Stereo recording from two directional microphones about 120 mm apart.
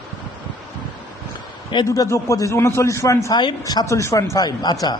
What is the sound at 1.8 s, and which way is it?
A man's voice, 25° left (ahead or behind).